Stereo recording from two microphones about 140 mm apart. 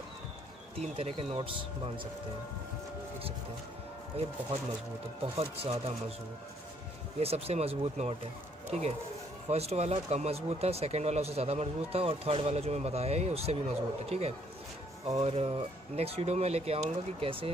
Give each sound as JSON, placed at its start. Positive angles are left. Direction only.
{"t": 0.7, "sound": "speech", "side_deg": -45}
{"t": 4.2, "sound": "speech", "side_deg": -45}
{"t": 7.2, "sound": "speech", "side_deg": -45}